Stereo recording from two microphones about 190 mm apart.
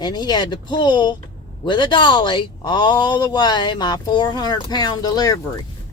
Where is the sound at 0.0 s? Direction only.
20° left (ahead or behind).